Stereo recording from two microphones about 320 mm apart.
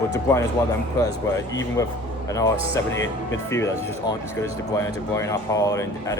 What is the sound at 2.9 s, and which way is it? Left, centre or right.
Speech, left.